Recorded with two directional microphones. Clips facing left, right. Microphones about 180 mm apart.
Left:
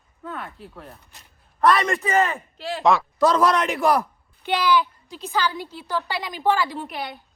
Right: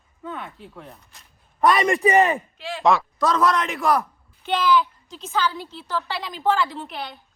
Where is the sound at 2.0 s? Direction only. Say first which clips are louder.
Right 4 dB; 15° right (ahead or behind).